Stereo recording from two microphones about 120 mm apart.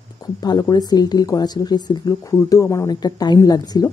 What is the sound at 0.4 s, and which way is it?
Speech, 35° left (ahead or behind).